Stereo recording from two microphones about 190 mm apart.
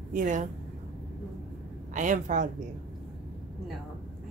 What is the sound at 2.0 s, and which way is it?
Speech, 40° right (ahead or behind).